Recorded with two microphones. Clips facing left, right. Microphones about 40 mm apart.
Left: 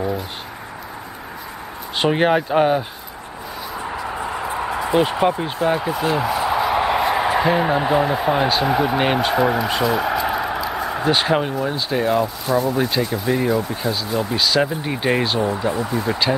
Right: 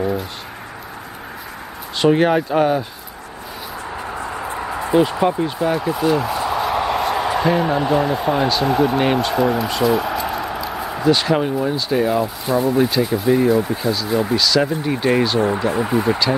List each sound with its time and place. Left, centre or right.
2.0 s speech: centre
4.9 s a man's voice: left
9.8 s a sound: centre
11.0 s speech: left
11.6 s speech: centre
12.4 s speech: centre
13.3 s speech: centre
14.3 s speech: centre
15.7 s speech: right